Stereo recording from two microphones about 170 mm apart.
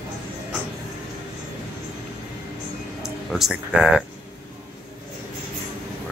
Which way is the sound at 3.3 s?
Centre (ahead or behind).